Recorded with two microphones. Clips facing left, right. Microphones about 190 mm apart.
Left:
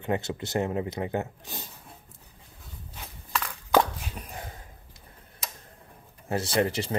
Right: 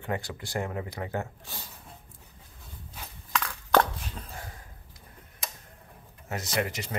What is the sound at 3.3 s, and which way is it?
Crushing, centre (ahead or behind).